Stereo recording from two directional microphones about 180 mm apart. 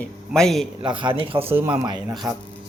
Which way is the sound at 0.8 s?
25° right (ahead or behind).